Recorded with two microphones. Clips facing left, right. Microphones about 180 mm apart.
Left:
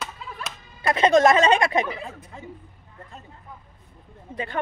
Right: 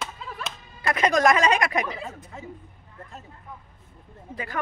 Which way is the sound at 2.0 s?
Centre (ahead or behind).